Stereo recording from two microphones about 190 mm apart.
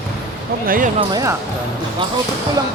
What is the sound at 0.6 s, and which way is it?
Speech, 50° right (ahead or behind).